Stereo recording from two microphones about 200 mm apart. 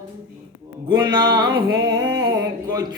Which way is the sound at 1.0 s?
20° right (ahead or behind).